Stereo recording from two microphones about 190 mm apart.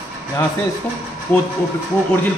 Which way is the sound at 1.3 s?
10° left (ahead or behind).